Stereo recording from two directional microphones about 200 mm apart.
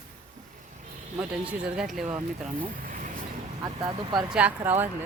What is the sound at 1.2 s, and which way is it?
Speech, 5° right (ahead or behind).